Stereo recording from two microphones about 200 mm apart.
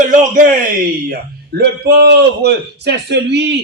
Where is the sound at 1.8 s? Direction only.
55° right (ahead or behind).